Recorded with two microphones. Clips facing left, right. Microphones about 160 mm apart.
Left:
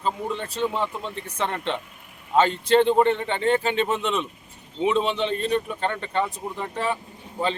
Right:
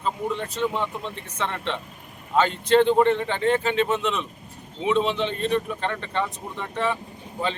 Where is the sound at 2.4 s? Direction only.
30° left (ahead or behind).